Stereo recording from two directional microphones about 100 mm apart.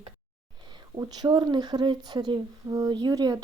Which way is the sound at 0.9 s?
45° right (ahead or behind).